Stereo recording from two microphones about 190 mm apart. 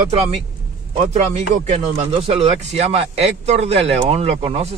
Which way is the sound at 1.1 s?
35° right (ahead or behind).